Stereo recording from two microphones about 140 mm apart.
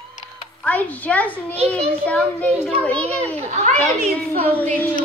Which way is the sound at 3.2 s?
50° right (ahead or behind).